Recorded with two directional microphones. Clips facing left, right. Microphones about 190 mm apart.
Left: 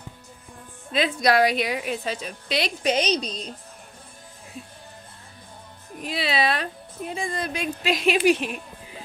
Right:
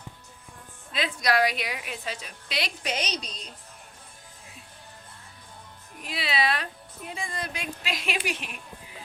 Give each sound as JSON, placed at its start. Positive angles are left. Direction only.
{"t": 0.9, "sound": "a woman's voice", "side_deg": 30}
{"t": 6.0, "sound": "a woman's voice", "side_deg": 30}